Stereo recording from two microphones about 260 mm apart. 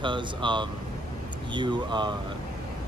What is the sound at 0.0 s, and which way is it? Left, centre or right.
Speech, centre.